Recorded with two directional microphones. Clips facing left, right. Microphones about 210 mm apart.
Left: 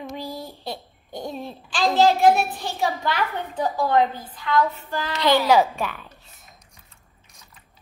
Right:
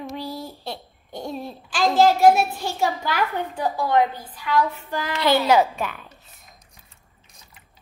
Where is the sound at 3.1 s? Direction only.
10° right (ahead or behind).